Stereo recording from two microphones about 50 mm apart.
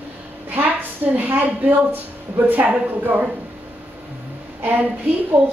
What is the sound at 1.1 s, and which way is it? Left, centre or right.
A woman's voice, right.